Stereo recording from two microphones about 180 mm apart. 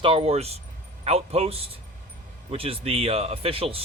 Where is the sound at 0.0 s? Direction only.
30° right (ahead or behind).